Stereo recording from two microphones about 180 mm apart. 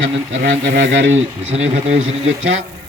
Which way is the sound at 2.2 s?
90° right.